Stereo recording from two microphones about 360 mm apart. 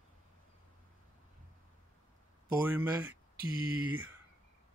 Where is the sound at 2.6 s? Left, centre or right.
Centre.